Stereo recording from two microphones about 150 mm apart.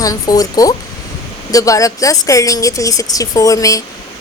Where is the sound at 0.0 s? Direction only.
25° left (ahead or behind).